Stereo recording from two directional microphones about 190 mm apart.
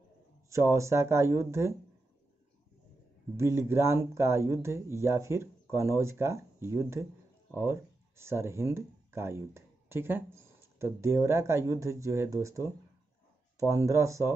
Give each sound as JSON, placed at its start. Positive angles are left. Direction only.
{"t": 0.5, "sound": "speech", "side_deg": -15}
{"t": 3.3, "sound": "speech", "side_deg": -15}